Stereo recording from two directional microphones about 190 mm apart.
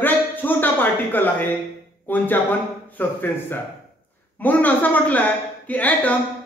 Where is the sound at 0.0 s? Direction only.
10° left (ahead or behind).